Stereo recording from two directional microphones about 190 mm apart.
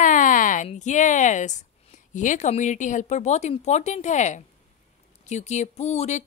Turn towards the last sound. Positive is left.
turn(degrees=35)  # may be behind; listen again after turning